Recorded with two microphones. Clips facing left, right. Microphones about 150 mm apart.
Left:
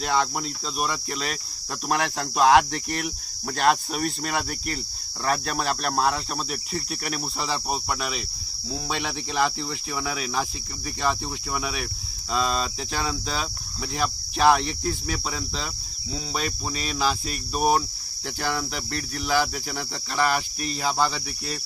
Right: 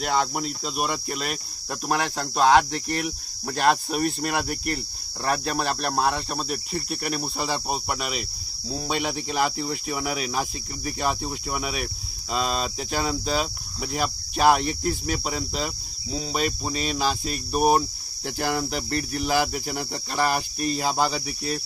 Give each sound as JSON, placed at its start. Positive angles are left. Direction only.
{"t": 0.1, "sound": "cricket", "side_deg": -5}
{"t": 15.0, "sound": "cricket", "side_deg": -25}
{"t": 17.5, "sound": "cricket", "side_deg": -5}
{"t": 18.3, "sound": "cricket", "side_deg": -40}
{"t": 19.4, "sound": "cricket", "side_deg": -20}
{"t": 19.9, "sound": "cricket", "side_deg": -40}
{"t": 20.7, "sound": "cricket", "side_deg": -15}